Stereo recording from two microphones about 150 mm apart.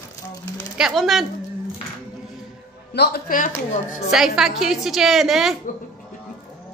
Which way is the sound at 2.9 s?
90° left.